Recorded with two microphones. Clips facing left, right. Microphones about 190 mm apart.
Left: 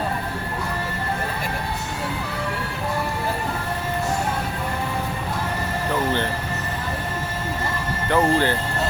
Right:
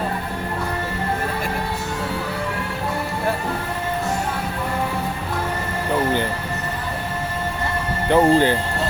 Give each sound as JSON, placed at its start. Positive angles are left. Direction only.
{"t": 8.1, "sound": "speech", "side_deg": -15}